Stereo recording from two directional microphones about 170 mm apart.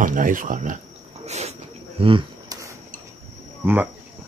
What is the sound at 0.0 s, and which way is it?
Speech, 50° right (ahead or behind).